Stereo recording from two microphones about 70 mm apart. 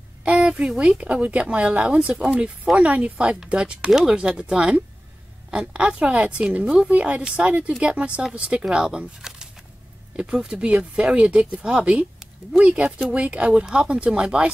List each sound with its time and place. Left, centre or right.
0.2 s speech: centre